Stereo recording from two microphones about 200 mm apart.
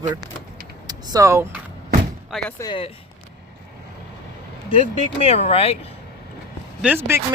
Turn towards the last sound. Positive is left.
turn(degrees=-10)  # may be behind; listen again after turning